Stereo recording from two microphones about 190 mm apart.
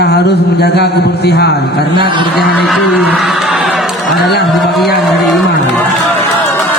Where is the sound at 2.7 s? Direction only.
Centre (ahead or behind).